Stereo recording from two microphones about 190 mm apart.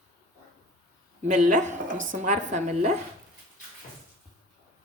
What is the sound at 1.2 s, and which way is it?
A woman's voice, 40° right (ahead or behind).